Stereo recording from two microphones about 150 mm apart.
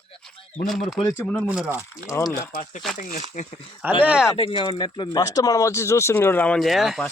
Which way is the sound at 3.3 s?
55° left (ahead or behind).